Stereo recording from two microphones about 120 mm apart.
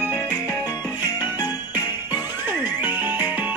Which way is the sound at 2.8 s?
15° right (ahead or behind).